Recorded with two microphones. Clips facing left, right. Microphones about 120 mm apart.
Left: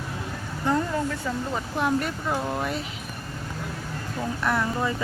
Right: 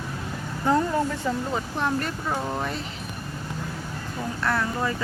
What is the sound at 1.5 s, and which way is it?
Speech, 5° left (ahead or behind).